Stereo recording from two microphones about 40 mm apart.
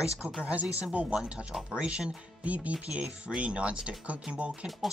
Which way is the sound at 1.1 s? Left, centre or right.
Right.